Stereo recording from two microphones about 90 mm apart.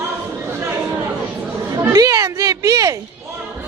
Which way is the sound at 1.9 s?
40° right (ahead or behind).